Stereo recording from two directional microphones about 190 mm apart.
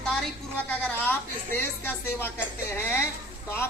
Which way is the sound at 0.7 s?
5° left (ahead or behind).